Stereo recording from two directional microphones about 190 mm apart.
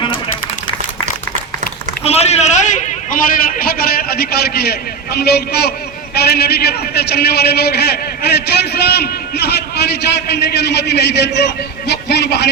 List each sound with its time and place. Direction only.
2.0 s a man's voice: 35° left (ahead or behind); by 12.5 s 60° left (ahead or behind)